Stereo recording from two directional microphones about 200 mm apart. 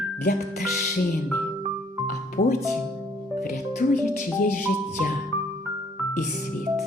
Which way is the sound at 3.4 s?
40° left (ahead or behind).